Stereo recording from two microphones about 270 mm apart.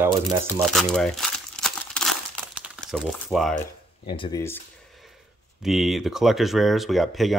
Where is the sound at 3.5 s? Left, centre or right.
Centre.